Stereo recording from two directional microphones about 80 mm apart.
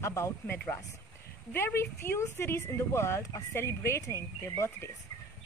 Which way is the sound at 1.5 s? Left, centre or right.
Left.